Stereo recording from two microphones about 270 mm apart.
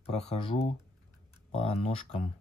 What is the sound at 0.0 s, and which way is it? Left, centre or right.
Speech, left.